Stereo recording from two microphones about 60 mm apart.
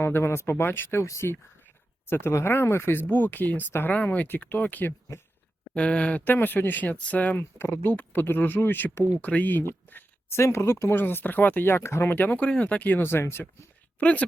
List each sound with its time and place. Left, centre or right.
0.0 s speech: left
3.9 s speech: left
5.7 s speech: centre
6.2 s speech: left
7.3 s speech: left
7.9 s speech: left
10.2 s speech: left
10.9 s speech: left
12.1 s speech: left
13.0 s speech: left
14.0 s speech: left